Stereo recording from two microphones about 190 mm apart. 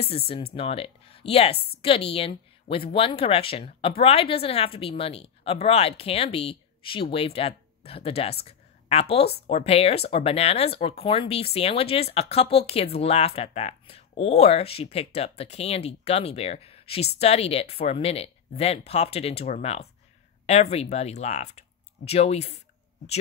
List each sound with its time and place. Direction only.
0.0 s speech: 30° left (ahead or behind)